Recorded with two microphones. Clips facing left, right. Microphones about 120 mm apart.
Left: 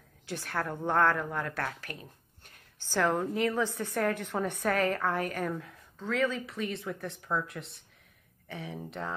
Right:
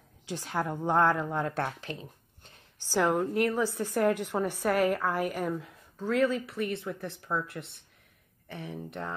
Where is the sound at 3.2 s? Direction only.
Centre (ahead or behind).